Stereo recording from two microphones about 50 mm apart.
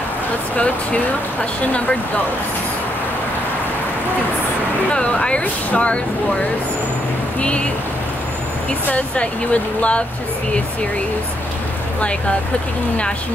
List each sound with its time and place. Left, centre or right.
4.9 s speech: left
8.9 s speech: left